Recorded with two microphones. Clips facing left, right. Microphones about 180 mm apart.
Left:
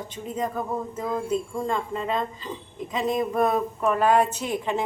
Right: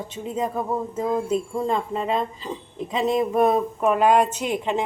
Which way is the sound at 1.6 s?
25° right (ahead or behind).